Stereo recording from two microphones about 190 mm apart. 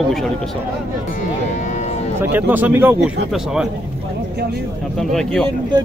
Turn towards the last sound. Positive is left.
turn(degrees=5)  # may be behind; listen again after turning